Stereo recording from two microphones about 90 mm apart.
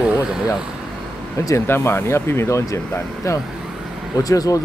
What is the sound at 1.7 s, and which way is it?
Speech, 25° left (ahead or behind).